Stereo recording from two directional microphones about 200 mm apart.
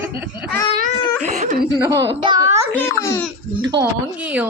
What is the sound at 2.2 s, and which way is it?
Speech, 20° right (ahead or behind).